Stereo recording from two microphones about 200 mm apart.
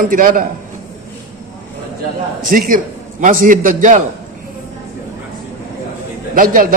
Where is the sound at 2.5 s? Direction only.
45° right (ahead or behind).